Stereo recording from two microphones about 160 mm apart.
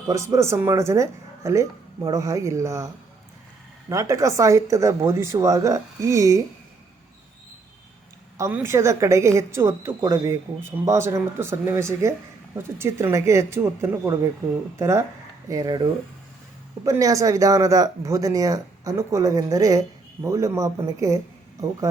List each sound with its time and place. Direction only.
0.1 s speech: 20° right (ahead or behind)
8.4 s a woman's voice: 15° right (ahead or behind)